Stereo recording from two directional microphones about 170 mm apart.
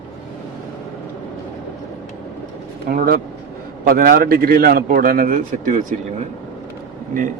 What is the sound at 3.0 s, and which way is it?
A man's voice, 60° right (ahead or behind).